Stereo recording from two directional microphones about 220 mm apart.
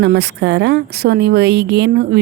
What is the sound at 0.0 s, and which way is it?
A woman's voice, 50° right (ahead or behind).